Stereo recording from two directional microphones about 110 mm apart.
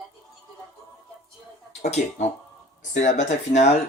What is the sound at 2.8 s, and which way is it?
Speech, 90° left.